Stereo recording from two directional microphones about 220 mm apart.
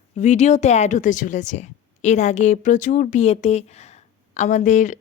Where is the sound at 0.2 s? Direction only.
30° left (ahead or behind).